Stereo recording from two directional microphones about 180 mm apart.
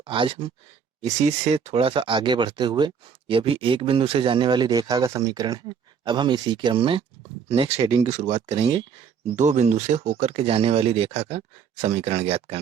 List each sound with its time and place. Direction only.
0.0 s speech: 30° right (ahead or behind)